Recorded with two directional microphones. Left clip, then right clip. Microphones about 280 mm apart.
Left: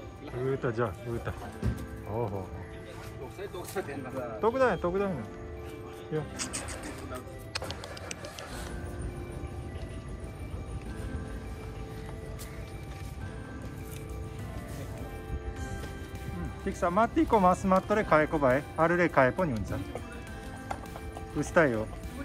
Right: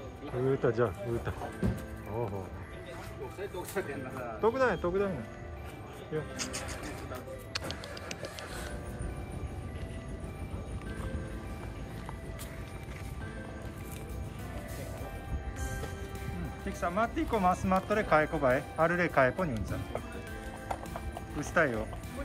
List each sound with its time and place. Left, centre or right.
0.5 s speech: centre
1.6 s speech: right
4.4 s speech: centre
6.1 s speech: centre
7.5 s music: centre
16.6 s speech: centre
21.4 s speech: centre